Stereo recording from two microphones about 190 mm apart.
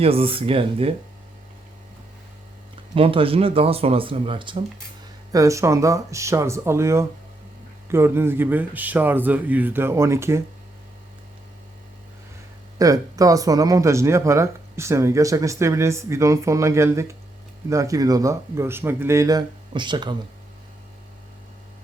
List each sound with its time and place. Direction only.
0.0 s speech: 30° right (ahead or behind)
2.9 s speech: 30° right (ahead or behind)
12.8 s speech: 20° right (ahead or behind)